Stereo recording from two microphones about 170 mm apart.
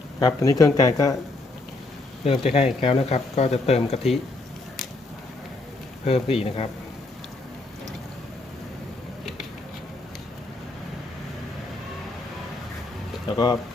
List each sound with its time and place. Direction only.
0.2 s speech: 20° left (ahead or behind)
2.2 s speech: 35° left (ahead or behind)
6.1 s speech: 35° left (ahead or behind)
13.3 s speech: 25° left (ahead or behind)